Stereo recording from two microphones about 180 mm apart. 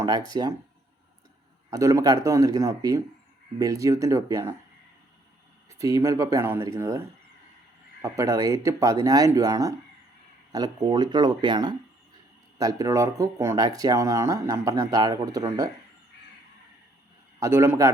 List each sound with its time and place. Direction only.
0.0 s speech: 20° right (ahead or behind)
1.7 s speech: 20° right (ahead or behind)
5.6 s speech: 15° right (ahead or behind)
8.0 s speech: 15° right (ahead or behind)
17.4 s speech: 15° right (ahead or behind)